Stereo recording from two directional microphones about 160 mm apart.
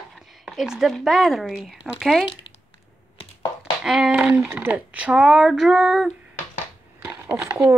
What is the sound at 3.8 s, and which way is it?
Speech, 5° right (ahead or behind).